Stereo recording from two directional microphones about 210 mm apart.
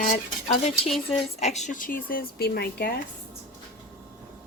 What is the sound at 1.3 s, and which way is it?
Speech, 30° left (ahead or behind).